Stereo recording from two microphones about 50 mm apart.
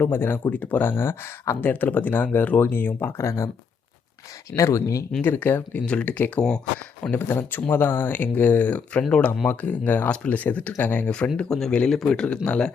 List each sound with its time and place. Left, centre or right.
0.0 s speech: left
0.5 s speech: left
0.8 s speech: left
1.7 s speech: left
3.2 s speech: left
4.5 s speech: left
5.2 s speech: left
5.8 s speech: left
7.1 s speech: left
11.0 s speech: left